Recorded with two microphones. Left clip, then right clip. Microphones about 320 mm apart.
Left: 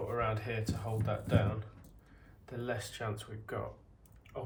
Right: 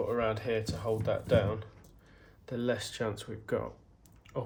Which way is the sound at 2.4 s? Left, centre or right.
Right.